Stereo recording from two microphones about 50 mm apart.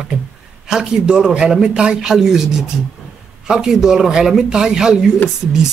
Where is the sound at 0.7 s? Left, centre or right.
Centre.